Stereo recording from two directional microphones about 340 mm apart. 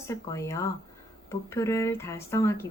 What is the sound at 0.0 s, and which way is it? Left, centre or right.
Speech, centre.